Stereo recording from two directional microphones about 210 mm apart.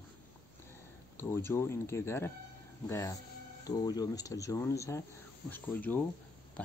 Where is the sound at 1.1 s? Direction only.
10° left (ahead or behind).